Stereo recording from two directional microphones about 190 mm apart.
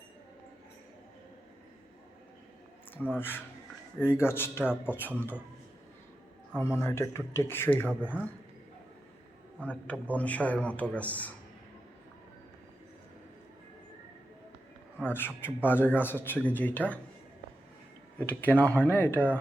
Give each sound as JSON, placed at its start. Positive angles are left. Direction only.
{"t": 2.9, "sound": "a man's voice", "side_deg": 10}
{"t": 6.7, "sound": "speech", "side_deg": 15}
{"t": 7.9, "sound": "speech", "side_deg": -5}
{"t": 9.6, "sound": "speech", "side_deg": 5}
{"t": 15.0, "sound": "speech", "side_deg": 10}
{"t": 18.2, "sound": "speech", "side_deg": 10}